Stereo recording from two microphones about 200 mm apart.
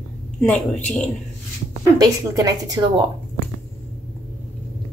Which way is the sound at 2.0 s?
20° right (ahead or behind).